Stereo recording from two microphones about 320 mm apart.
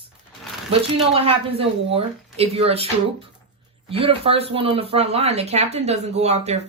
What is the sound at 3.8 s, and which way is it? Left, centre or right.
Speech, centre.